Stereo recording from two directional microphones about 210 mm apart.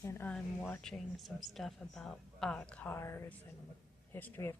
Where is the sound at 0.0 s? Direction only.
10° left (ahead or behind).